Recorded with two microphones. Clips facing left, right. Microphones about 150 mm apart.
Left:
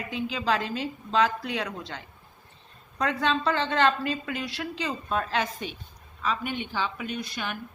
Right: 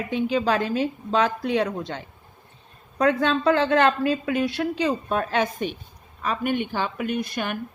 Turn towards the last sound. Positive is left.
turn(degrees=-55)  # may be behind; listen again after turning